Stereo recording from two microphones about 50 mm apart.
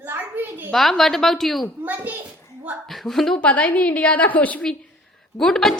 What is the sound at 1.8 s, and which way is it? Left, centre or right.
Speech, right.